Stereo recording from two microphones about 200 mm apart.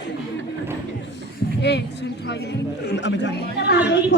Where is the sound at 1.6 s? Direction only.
55° left (ahead or behind).